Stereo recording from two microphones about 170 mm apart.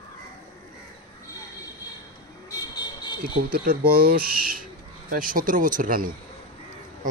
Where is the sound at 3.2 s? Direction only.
60° right (ahead or behind).